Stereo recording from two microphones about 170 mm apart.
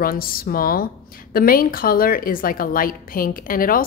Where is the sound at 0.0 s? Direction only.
60° left (ahead or behind).